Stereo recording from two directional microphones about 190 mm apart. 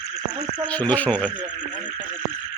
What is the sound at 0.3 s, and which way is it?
Insect, 20° right (ahead or behind).